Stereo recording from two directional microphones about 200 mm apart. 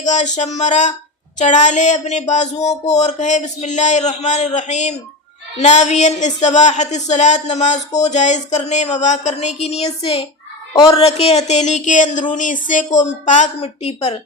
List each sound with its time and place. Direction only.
0.0 s speech: 35° left (ahead or behind)
9.6 s child singing: 30° left (ahead or behind)
10.8 s speech: 25° left (ahead or behind)